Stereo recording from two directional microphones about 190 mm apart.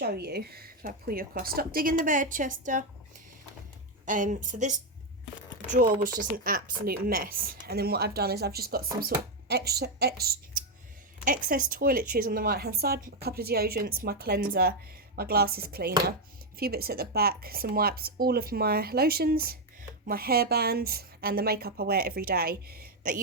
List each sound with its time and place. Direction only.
0.0 s a woman's voice: 55° right (ahead or behind)
4.0 s a woman's voice: 40° right (ahead or behind); by 10.3 s 55° right (ahead or behind)
11.3 s a woman's voice: 45° right (ahead or behind)